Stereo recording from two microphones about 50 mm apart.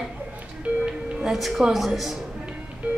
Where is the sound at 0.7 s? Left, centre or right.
Right.